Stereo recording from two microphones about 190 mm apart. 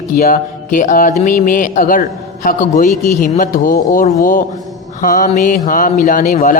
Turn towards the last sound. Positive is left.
turn(degrees=45)  # may be behind; listen again after turning